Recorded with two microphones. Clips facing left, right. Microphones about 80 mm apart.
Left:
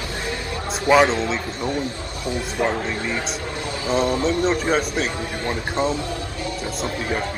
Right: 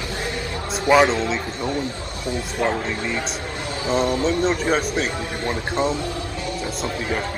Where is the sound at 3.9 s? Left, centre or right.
Left.